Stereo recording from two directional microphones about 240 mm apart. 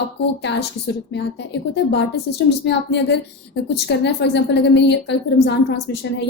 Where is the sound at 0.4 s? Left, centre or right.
Left.